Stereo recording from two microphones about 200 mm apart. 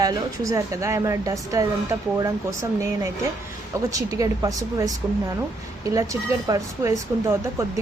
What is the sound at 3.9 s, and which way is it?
A woman's voice, 15° right (ahead or behind).